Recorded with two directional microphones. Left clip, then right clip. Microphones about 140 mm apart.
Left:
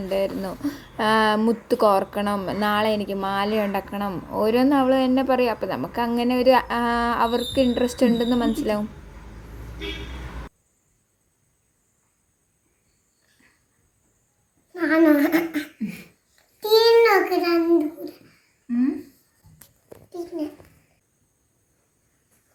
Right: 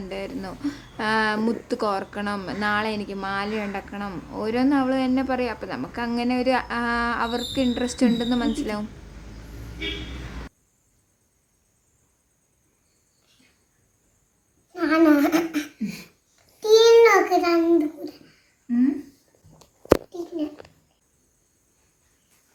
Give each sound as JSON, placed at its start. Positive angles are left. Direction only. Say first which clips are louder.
{"t": 0.1, "sound": "a woman's voice", "louder": "left 9 dB", "side_deg": 20}
{"t": 14.7, "sound": "laughter", "louder": "left 1 dB", "side_deg": -20}
{"t": 15.9, "sound": "babbling", "louder": "right 1 dB", "side_deg": -10}